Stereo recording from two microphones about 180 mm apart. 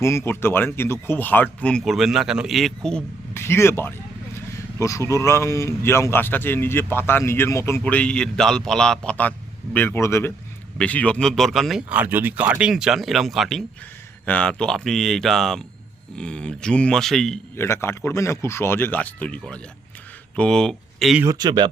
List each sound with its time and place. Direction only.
0.0 s speech: 15° left (ahead or behind)
17.6 s speech: 15° left (ahead or behind)
21.2 s speech: 25° right (ahead or behind)